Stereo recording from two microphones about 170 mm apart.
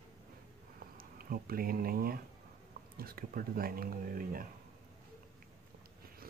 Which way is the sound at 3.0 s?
60° right (ahead or behind).